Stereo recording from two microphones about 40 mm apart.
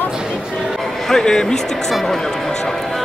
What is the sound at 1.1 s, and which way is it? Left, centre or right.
Speech, centre.